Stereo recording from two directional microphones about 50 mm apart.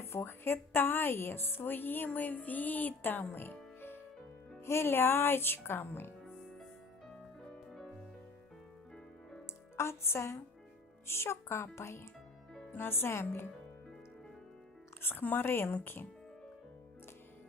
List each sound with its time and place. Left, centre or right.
0.3 s a woman's voice: left
2.1 s a sound: left
3.3 s music: left
4.6 s a woman's voice: left
7.7 s music: centre
9.7 s a woman's voice: left
15.0 s a woman's voice: left